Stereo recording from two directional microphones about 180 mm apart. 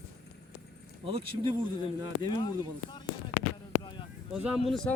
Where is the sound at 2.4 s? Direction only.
25° left (ahead or behind).